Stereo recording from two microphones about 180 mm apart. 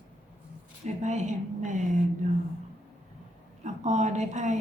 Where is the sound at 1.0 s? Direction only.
40° right (ahead or behind).